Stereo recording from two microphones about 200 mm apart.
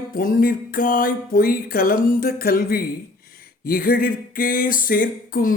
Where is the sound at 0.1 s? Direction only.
45° left (ahead or behind).